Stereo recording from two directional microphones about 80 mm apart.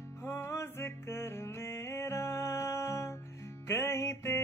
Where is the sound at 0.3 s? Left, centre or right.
Left.